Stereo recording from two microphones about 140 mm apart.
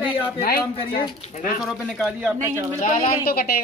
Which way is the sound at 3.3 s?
90° left.